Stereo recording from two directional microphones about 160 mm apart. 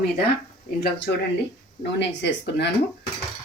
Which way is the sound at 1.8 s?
90° left.